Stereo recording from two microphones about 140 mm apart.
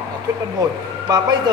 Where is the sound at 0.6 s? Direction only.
30° right (ahead or behind).